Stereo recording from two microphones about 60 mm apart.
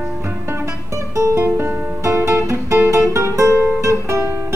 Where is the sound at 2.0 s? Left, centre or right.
Right.